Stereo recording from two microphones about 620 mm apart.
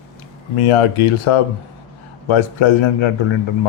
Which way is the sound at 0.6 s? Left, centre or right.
Left.